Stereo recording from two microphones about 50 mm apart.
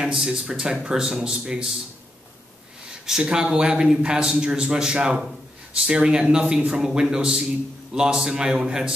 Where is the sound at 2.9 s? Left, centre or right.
Centre.